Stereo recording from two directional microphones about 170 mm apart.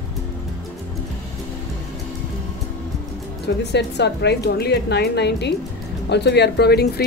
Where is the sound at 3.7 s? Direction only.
80° left.